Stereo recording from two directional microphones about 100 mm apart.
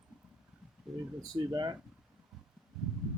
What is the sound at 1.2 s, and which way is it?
Speech, 45° right (ahead or behind).